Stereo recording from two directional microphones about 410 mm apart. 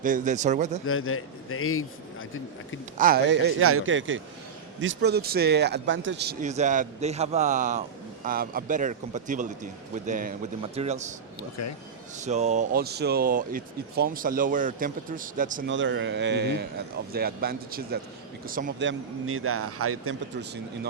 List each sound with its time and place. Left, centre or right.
0.0 s a man's voice: centre
0.9 s a man's voice: left
3.0 s a man's voice: right
11.3 s a man's voice: left
12.2 s speech: centre; by 20.1 s right